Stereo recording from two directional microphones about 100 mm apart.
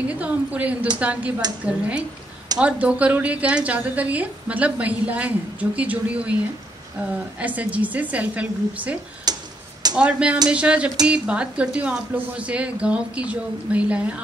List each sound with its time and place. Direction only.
0.1 s a woman's voice: 15° right (ahead or behind)
7.3 s a woman's voice: 15° right (ahead or behind)
9.3 s tick-tock: 40° right (ahead or behind)
9.9 s a woman's voice: 10° right (ahead or behind)